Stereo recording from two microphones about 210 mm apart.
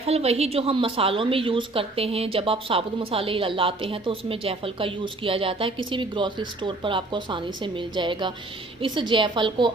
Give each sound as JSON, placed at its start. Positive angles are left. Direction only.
{"t": 0.0, "sound": "a woman's voice", "side_deg": -30}